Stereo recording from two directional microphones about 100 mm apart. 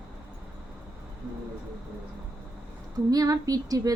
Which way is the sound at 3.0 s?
40° right (ahead or behind).